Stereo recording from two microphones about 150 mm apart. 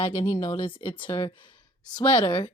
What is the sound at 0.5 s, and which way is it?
Speech, 35° left (ahead or behind).